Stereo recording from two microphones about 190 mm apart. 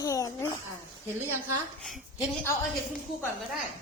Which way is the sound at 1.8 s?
Centre (ahead or behind).